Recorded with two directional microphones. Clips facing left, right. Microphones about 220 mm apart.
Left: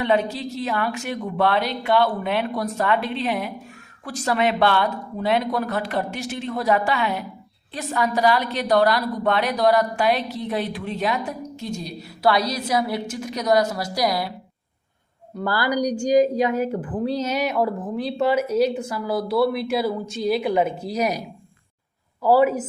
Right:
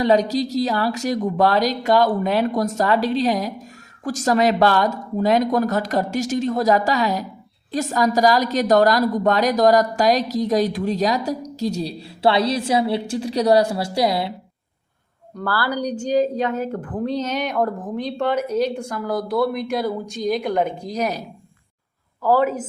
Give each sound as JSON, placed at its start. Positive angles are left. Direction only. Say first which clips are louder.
{"t": 0.0, "sound": "a woman's voice", "louder": "right 4 dB", "side_deg": -40}
{"t": 15.4, "sound": "a woman's voice", "louder": "left 1 dB", "side_deg": 15}